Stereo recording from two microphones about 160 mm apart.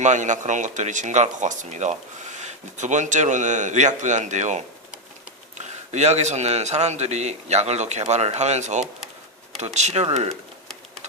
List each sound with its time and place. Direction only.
0.0 s speech: 50° right (ahead or behind)
5.6 s speech: 45° right (ahead or behind)